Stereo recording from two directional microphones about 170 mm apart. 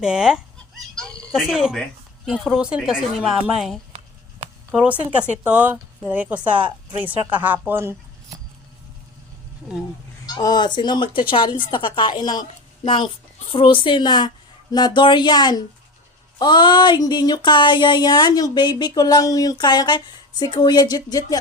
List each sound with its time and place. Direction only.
0.0 s chicken: 5° right (ahead or behind)
2.2 s speech: 5° right (ahead or behind)
10.2 s speech: 25° left (ahead or behind)